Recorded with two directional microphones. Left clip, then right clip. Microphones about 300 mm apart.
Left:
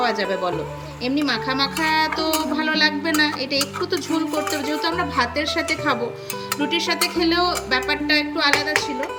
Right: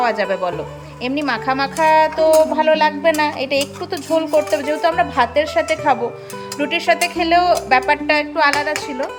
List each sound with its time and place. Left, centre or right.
0.0 s speech: centre